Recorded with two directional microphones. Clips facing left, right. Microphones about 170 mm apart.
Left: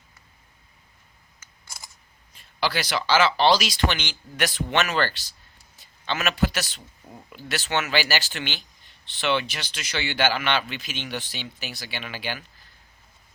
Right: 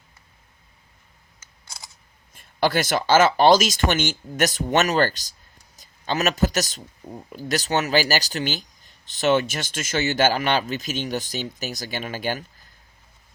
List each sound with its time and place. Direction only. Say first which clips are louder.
2.3 s a man's voice: right 5 dB; 50° right (ahead or behind)